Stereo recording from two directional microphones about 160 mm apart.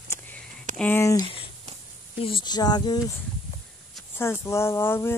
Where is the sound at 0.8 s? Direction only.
15° left (ahead or behind).